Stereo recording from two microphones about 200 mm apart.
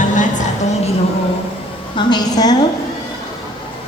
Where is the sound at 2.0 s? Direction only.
20° left (ahead or behind).